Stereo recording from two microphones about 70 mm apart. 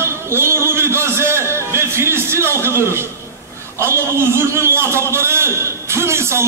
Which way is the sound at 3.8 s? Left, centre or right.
Right.